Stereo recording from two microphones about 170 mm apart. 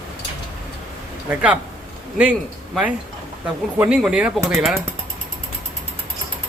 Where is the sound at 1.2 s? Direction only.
5° right (ahead or behind).